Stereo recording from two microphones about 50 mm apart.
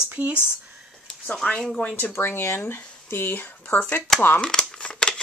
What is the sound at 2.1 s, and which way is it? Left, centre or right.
Speech, left.